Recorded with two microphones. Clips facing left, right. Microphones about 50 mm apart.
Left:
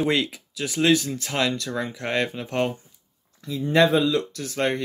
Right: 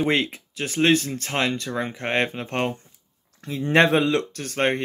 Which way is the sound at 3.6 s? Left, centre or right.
Right.